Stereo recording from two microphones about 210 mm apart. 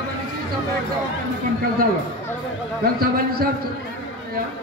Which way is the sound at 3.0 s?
45° right (ahead or behind).